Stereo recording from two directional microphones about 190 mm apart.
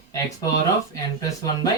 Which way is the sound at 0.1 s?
20° left (ahead or behind).